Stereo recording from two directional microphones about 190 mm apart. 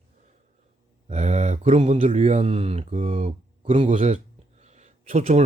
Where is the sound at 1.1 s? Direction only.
35° right (ahead or behind).